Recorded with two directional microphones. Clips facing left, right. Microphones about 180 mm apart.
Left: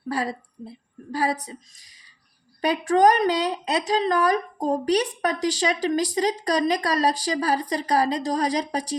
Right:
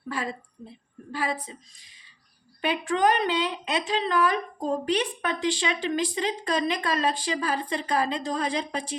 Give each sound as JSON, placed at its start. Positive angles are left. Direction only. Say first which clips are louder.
{"t": 0.1, "sound": "a woman's voice", "louder": "left 5 dB", "side_deg": 35}
{"t": 2.6, "sound": "a woman's voice", "louder": "left 5 dB", "side_deg": 40}